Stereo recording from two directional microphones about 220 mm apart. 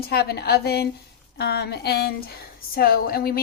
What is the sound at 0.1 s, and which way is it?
A woman's voice, 45° left (ahead or behind).